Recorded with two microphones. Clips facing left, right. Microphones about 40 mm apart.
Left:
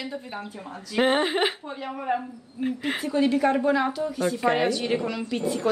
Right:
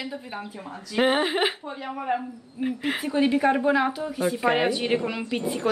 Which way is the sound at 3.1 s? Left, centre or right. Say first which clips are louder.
Even; centre.